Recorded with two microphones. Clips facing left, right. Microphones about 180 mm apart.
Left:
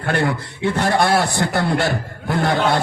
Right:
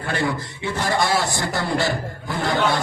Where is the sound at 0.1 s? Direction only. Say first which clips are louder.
Left 4 dB; 60° left (ahead or behind).